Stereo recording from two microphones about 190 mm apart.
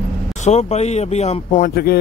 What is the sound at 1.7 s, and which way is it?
Speech, 55° left (ahead or behind).